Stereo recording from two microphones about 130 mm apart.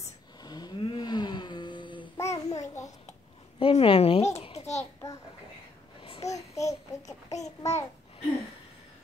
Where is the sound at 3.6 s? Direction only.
45° left (ahead or behind).